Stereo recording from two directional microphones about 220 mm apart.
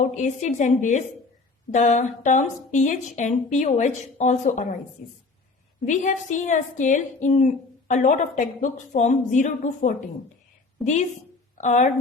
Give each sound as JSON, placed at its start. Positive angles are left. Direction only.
{"t": 0.0, "sound": "a woman's voice", "side_deg": 35}
{"t": 11.5, "sound": "speech", "side_deg": 35}